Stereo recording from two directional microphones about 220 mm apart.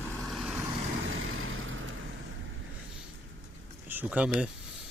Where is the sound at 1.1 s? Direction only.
65° right (ahead or behind).